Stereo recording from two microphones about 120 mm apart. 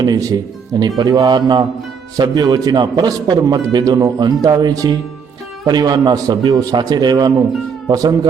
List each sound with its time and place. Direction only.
0.0 s a man's voice: 30° right (ahead or behind)